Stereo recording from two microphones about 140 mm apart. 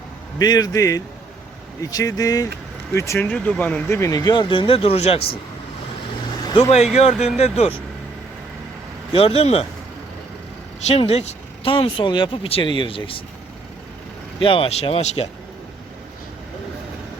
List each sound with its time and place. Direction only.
0.3 s speech: 30° left (ahead or behind); by 5.4 s 45° left (ahead or behind)
6.6 s speech: 50° left (ahead or behind)
9.1 s speech: 45° left (ahead or behind)
10.8 s speech: 45° left (ahead or behind)
14.3 s speech: 40° left (ahead or behind)